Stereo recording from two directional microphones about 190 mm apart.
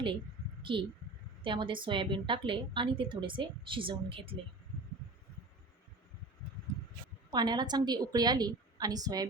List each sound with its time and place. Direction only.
0.6 s a woman's voice: 25° right (ahead or behind)
7.3 s a woman's voice: 20° right (ahead or behind)